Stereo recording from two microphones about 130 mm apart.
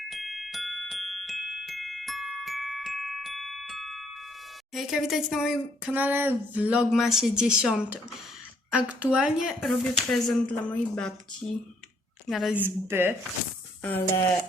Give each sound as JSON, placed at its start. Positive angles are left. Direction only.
{"t": 0.1, "sound": "glockenspiel", "side_deg": 0}
{"t": 4.7, "sound": "speech", "side_deg": 0}
{"t": 12.5, "sound": "speech", "side_deg": -15}